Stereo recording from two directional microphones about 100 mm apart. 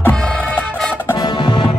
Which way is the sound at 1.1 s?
45° left (ahead or behind).